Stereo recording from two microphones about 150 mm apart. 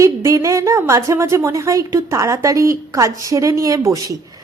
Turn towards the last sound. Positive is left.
turn(degrees=-20)  # may be behind; listen again after turning